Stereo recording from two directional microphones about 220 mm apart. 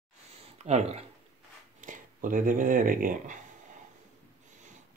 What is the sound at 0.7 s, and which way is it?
Speech, 30° right (ahead or behind).